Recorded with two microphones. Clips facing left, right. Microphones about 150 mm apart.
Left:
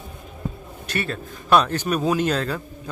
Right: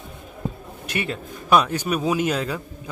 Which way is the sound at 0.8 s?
15° right (ahead or behind).